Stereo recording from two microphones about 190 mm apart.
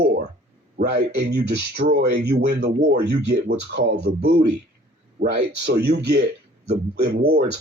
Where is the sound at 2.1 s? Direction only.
60° right (ahead or behind).